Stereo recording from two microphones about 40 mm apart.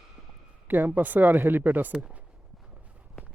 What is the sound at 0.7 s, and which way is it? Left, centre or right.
Speech, right.